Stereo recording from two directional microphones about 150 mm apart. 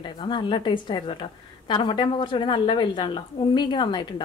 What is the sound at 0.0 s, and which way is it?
A woman's voice, 30° left (ahead or behind).